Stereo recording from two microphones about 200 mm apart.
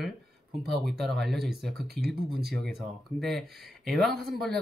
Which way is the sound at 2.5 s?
Centre (ahead or behind).